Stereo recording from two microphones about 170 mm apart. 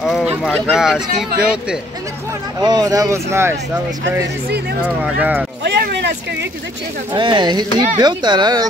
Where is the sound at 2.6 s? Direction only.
20° right (ahead or behind).